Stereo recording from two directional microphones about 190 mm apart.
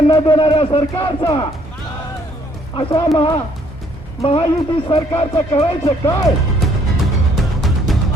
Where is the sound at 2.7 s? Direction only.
25° left (ahead or behind).